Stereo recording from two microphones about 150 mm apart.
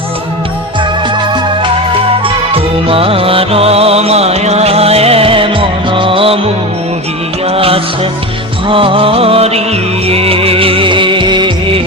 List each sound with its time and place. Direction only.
1.1 s music: 30° right (ahead or behind)